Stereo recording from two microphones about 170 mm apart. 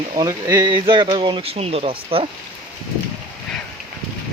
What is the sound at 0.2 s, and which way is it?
Speech, 25° right (ahead or behind).